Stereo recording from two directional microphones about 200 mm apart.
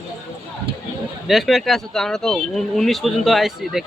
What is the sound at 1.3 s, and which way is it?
Speech, centre (ahead or behind).